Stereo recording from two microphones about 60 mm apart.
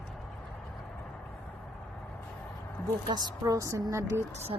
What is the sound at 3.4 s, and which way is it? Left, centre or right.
Speech, right.